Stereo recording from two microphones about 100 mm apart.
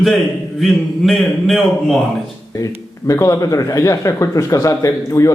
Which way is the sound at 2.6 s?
30° left (ahead or behind).